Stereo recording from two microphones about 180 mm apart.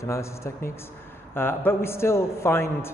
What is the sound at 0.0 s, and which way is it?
A man's voice, 15° left (ahead or behind).